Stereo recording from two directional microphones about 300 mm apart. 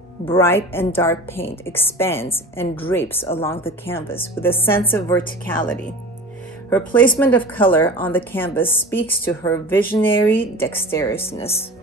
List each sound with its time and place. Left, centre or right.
0.3 s a woman's voice: centre
11.2 s speech: centre